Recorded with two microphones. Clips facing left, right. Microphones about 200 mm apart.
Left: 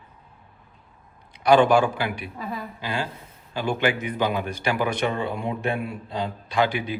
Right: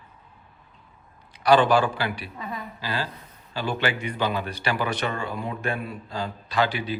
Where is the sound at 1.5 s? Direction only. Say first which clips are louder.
Left 2 dB; 10° left (ahead or behind).